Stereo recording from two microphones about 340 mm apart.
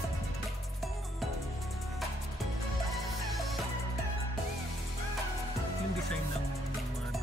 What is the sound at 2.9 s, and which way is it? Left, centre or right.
Music, centre.